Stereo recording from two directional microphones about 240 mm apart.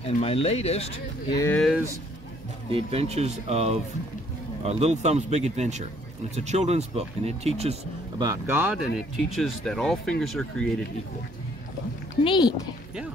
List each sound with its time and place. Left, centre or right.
0.0 s speech: left
1.4 s speech: centre
2.7 s speech: right
8.2 s speech: centre
9.3 s speech: centre
12.2 s speech: centre